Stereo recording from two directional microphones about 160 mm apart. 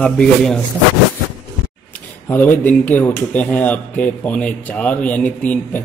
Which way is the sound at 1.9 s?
10° left (ahead or behind).